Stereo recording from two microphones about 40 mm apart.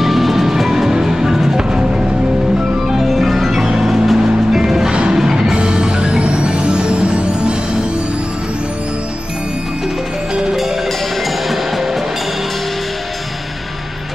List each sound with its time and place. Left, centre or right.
0.0 s music: centre
2.9 s music: centre; by 7.5 s right
11.4 s music: centre